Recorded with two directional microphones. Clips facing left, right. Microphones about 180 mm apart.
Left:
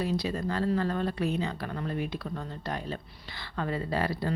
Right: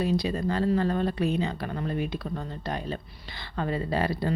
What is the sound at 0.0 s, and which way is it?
Speech, 20° right (ahead or behind).